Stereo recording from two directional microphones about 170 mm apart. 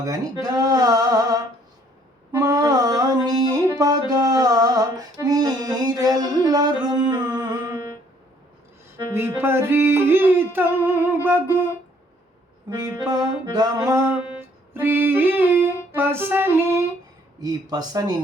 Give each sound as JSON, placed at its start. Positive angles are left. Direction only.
{"t": 0.0, "sound": "music", "side_deg": -20}
{"t": 9.1, "sound": "a sound", "side_deg": -15}
{"t": 13.1, "sound": "music", "side_deg": -25}